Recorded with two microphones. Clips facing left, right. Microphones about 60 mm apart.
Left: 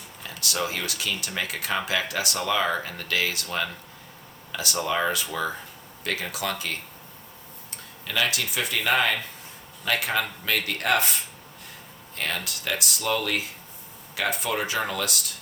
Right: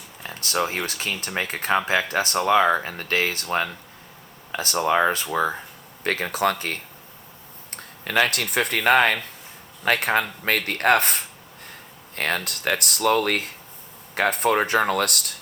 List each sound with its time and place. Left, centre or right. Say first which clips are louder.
0.2 s a sound: right 4 dB; right
0.9 s speech: right 2 dB; right
7.8 s speech: right 6 dB; right